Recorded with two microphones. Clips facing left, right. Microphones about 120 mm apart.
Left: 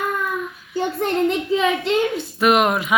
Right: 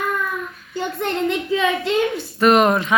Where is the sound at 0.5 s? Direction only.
5° left (ahead or behind).